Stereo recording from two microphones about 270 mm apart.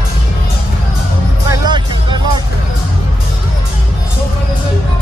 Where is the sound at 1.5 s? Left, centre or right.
Centre.